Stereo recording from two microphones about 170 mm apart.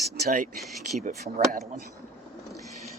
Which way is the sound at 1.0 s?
45° right (ahead or behind).